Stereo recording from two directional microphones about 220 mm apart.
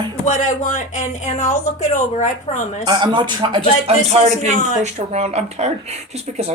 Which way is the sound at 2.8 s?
20° right (ahead or behind).